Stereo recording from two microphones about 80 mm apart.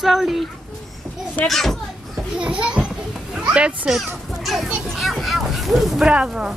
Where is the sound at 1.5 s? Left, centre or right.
Centre.